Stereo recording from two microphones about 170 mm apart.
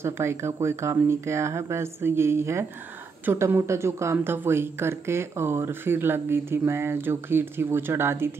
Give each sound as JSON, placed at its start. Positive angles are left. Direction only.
{"t": 0.0, "sound": "speech", "side_deg": -15}